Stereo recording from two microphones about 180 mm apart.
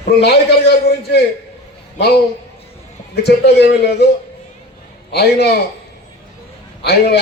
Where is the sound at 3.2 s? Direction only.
65° left (ahead or behind).